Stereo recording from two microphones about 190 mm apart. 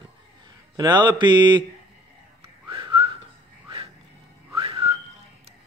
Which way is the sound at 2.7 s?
25° right (ahead or behind).